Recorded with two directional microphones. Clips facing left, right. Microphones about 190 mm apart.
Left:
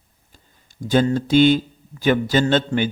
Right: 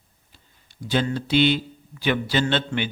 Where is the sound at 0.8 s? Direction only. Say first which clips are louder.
Left 6 dB; 45° left (ahead or behind).